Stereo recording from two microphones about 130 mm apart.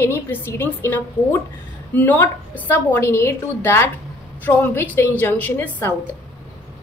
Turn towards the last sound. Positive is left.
turn(degrees=15)  # may be behind; listen again after turning